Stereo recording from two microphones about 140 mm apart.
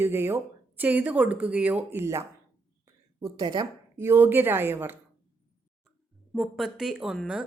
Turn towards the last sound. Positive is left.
turn(degrees=-5)  # may be behind; listen again after turning